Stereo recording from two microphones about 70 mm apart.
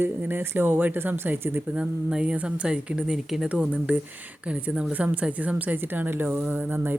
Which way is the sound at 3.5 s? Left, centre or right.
Centre.